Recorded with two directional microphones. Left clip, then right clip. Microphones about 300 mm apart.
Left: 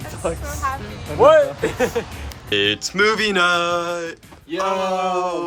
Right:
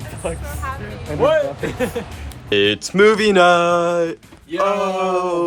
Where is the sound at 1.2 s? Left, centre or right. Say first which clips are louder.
Left 4 dB; left.